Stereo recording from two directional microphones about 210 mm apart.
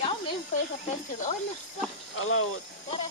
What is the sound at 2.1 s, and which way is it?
Speech, 80° left.